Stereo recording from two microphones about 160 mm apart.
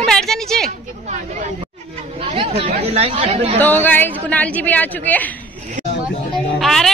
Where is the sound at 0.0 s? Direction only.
Centre (ahead or behind).